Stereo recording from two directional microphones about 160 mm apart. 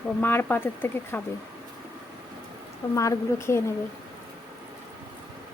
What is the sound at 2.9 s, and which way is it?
Speech, 20° left (ahead or behind).